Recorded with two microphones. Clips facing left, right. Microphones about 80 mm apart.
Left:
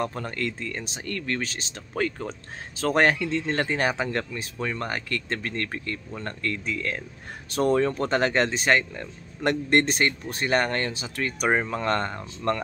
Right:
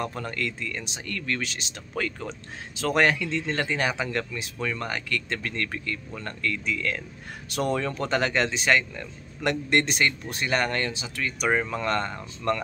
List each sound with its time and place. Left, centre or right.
0.0 s speech: left